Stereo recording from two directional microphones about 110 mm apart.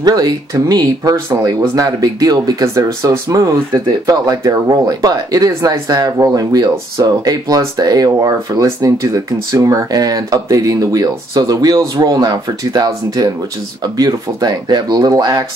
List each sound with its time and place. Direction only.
0.0 s speech: 35° right (ahead or behind)